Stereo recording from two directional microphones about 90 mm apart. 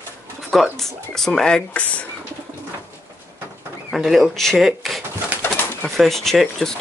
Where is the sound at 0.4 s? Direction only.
Centre (ahead or behind).